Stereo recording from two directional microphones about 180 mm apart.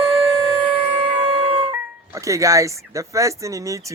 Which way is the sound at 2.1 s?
15° right (ahead or behind).